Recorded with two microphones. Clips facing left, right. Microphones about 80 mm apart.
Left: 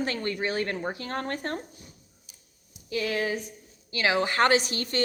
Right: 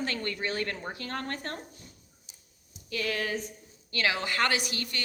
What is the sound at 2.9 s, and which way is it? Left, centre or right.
A woman's voice, centre.